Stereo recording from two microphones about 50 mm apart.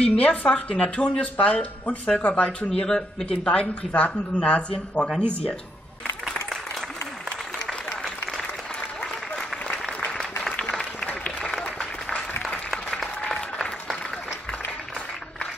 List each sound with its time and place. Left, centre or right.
0.2 s speech: left
2.9 s speech: centre
9.0 s applause: left
11.1 s applause: left
13.3 s applause: centre